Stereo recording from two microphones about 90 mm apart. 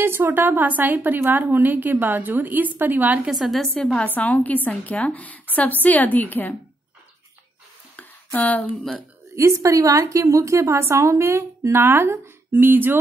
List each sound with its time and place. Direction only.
0.0 s a woman's voice: 25° right (ahead or behind)
3.3 s a woman's voice: centre (ahead or behind)
4.0 s a woman's voice: 15° left (ahead or behind)
8.4 s speech: 20° left (ahead or behind)
9.3 s a woman's voice: 35° right (ahead or behind)